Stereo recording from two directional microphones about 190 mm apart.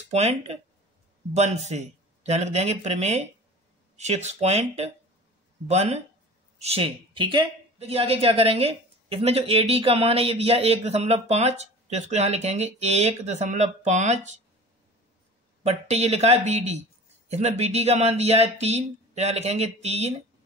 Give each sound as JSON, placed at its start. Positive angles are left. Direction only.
{"t": 0.1, "sound": "speech", "side_deg": -35}
{"t": 15.6, "sound": "speech", "side_deg": -35}